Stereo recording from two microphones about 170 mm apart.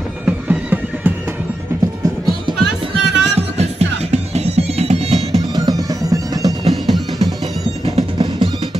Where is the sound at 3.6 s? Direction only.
40° right (ahead or behind).